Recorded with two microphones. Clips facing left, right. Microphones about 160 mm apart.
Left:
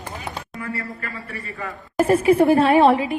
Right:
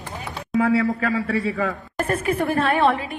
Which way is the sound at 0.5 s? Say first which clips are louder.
Right 17 dB; 90° right.